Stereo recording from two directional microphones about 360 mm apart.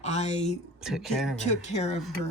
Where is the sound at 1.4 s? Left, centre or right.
Centre.